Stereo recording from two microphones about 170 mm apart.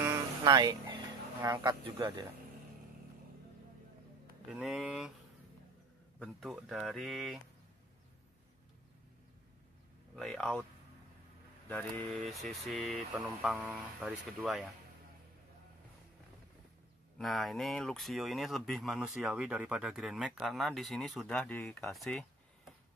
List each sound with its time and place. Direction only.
0.0 s a sound: 25° right (ahead or behind)
1.6 s speech: 25° right (ahead or behind)
4.5 s speech: 5° right (ahead or behind)
6.1 s speech: centre (ahead or behind)
10.1 s speech: 5° left (ahead or behind)
11.7 s speech: 5° left (ahead or behind)
17.2 s speech: centre (ahead or behind)